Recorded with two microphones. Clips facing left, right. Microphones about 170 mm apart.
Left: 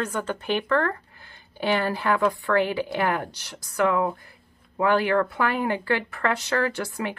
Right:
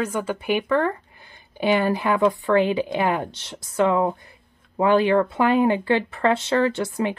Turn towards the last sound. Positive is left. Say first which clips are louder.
# right 5 dB
turn(degrees=-20)  # may be behind; listen again after turning